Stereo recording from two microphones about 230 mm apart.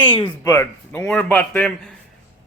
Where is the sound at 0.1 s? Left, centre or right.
Left.